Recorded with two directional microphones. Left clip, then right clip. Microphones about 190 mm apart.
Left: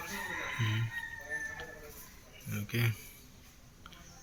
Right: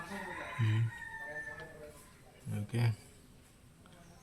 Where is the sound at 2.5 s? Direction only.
20° right (ahead or behind).